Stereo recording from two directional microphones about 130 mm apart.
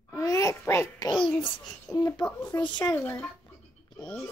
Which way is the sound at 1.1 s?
40° left (ahead or behind).